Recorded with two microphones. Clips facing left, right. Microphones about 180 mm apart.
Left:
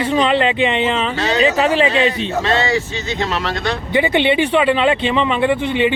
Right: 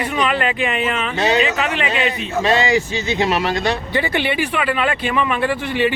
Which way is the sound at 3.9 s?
20° left (ahead or behind).